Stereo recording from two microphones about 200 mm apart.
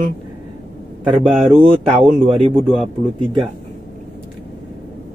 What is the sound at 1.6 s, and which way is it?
Speech, 25° right (ahead or behind).